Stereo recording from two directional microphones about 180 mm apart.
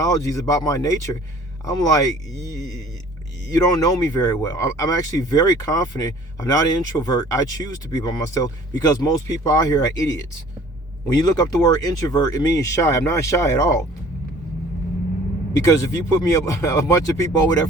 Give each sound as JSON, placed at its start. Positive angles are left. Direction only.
{"t": 0.0, "sound": "speech", "side_deg": 20}
{"t": 15.5, "sound": "speech", "side_deg": 15}